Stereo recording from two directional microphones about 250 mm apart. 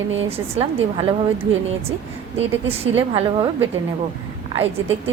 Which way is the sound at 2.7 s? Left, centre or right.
Right.